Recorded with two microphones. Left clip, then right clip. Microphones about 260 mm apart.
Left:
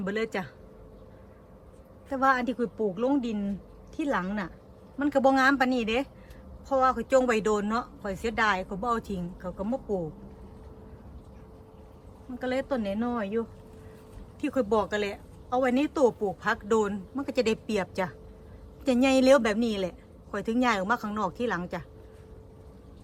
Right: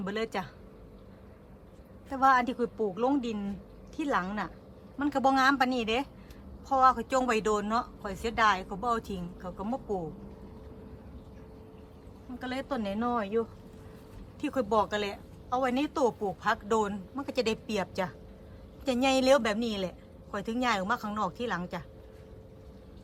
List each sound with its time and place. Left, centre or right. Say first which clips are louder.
0.0 s a woman's voice: left 3 dB; centre
2.0 s a woman's voice: right 1 dB; centre
12.4 s a woman's voice: left 5 dB; centre
14.4 s a woman's voice: left 1 dB; centre